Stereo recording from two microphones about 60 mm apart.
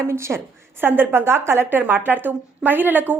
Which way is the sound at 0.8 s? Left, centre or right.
Right.